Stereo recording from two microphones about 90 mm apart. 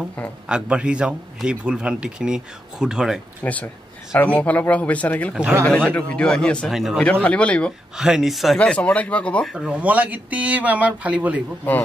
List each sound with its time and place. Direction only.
0.5 s a man's voice: 10° right (ahead or behind)
3.4 s speech: 15° left (ahead or behind)
6.7 s speech: 5° right (ahead or behind)
7.0 s speech: 15° left (ahead or behind)
8.0 s speech: 5° right (ahead or behind)
8.5 s speech: 15° left (ahead or behind)
9.5 s speech: 5° right (ahead or behind)
9.8 s a man's voice: 15° right (ahead or behind)